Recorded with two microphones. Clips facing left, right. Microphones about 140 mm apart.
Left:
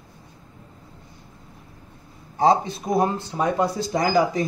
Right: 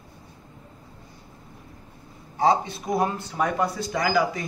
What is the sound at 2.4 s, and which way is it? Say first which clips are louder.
Speech: left 3 dB; 35° left (ahead or behind).